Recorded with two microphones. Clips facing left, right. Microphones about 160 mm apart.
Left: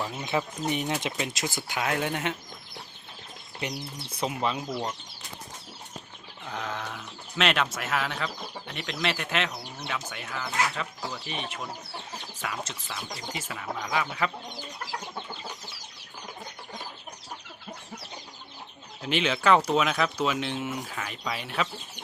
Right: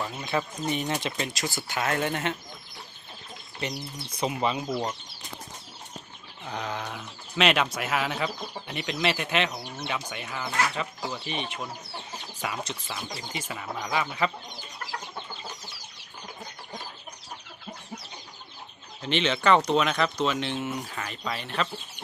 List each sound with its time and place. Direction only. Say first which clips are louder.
0.0 s speech: even; 5° left (ahead or behind)
4.2 s speech: right 2 dB; centre (ahead or behind)
6.5 s speech: right 1 dB; centre (ahead or behind)
19.0 s speech: even; 5° left (ahead or behind)